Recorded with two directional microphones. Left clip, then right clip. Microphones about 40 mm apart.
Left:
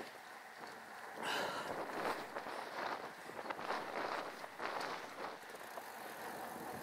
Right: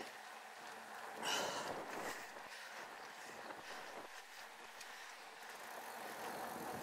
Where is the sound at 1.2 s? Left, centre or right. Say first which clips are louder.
Left 1 dB; right.